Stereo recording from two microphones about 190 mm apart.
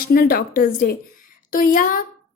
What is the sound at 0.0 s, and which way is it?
A woman's voice, 55° left (ahead or behind).